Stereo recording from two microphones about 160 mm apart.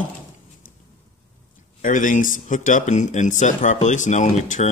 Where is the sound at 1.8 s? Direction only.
55° left (ahead or behind).